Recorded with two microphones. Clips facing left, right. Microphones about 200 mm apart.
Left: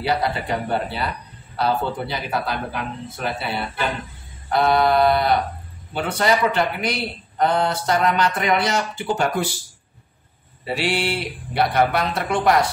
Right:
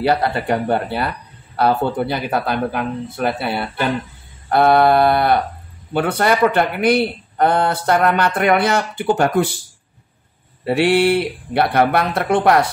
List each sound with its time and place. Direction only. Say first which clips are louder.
0.0 s speech: right 5 dB; 55° right (ahead or behind)
10.6 s speech: right 9 dB; 55° right (ahead or behind)